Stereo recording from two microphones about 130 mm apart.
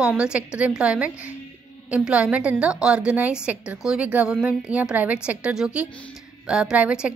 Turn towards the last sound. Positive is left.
turn(degrees=-10)  # may be behind; listen again after turning